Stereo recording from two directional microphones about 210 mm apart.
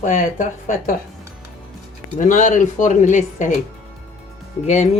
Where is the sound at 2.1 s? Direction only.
35° left (ahead or behind).